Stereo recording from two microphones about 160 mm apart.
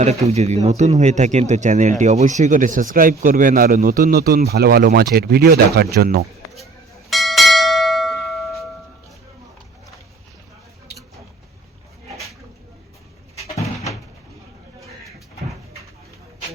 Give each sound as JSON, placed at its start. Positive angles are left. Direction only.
{"t": 0.0, "sound": "speech", "side_deg": -40}
{"t": 7.1, "sound": "church bell", "side_deg": 0}
{"t": 13.6, "sound": "door", "side_deg": 20}